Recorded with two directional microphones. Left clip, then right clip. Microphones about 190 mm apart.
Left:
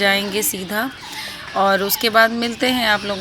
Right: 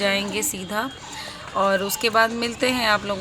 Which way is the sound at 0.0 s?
20° left (ahead or behind).